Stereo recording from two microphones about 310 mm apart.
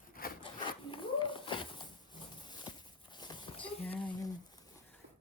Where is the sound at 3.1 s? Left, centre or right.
Centre.